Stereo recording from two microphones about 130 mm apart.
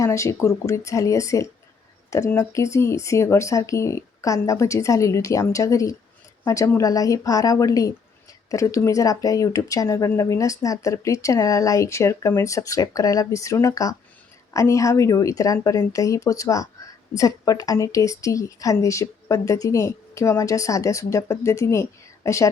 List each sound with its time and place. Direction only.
0.0 s speech: 20° left (ahead or behind)